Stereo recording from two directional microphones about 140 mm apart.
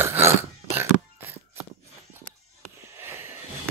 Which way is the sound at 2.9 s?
20° right (ahead or behind).